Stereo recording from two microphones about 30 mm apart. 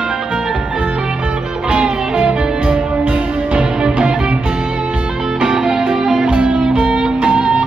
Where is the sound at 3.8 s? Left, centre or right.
Right.